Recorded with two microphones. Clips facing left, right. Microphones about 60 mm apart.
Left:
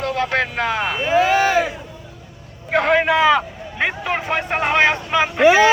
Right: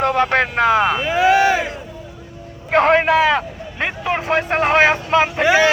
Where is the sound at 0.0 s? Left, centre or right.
Right.